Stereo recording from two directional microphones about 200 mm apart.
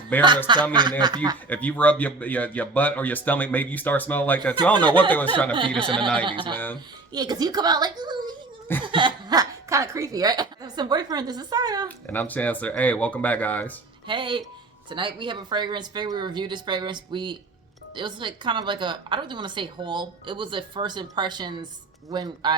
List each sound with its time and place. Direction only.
0.1 s speech: 10° left (ahead or behind)
0.7 s a woman's voice: 20° right (ahead or behind)
1.5 s speech: 5° left (ahead or behind)
5.8 s a woman's voice: 25° right (ahead or behind)
12.1 s speech: 10° left (ahead or behind)
14.1 s a woman's voice: 25° right (ahead or behind)